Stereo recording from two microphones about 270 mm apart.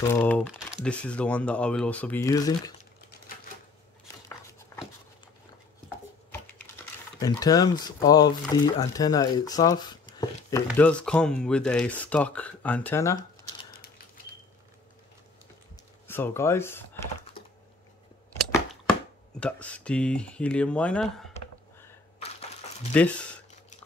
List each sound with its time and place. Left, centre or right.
0.1 s speech: centre
7.2 s speech: centre
10.7 s speech: centre
15.7 s a sound: centre
17.4 s typing: centre
19.4 s speech: centre